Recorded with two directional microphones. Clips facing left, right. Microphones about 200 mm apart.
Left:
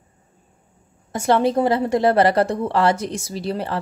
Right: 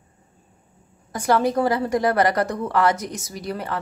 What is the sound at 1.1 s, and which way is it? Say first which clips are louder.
A woman's voice: left 2 dB; 25° left (ahead or behind).